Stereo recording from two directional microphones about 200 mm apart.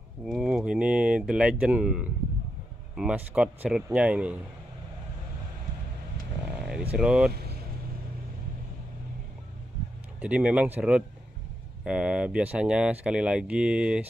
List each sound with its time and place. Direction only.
0.2 s speech: 5° right (ahead or behind)
6.9 s speech: 5° right (ahead or behind)
7.3 s vehicle: 55° right (ahead or behind)
10.2 s speech: 5° right (ahead or behind)